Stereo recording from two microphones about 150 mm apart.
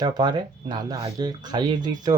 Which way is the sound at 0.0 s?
25° right (ahead or behind).